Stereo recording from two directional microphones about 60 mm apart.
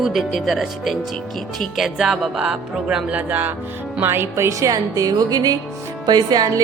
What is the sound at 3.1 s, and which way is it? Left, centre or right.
Music, right.